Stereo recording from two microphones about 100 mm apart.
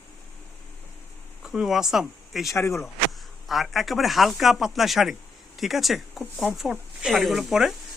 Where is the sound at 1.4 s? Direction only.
5° right (ahead or behind).